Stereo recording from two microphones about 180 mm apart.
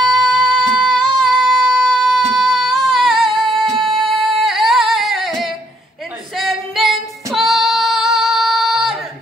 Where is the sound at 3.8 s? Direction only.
30° right (ahead or behind).